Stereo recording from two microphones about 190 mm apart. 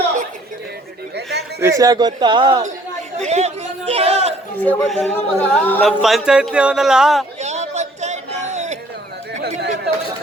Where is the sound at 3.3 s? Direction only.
35° right (ahead or behind).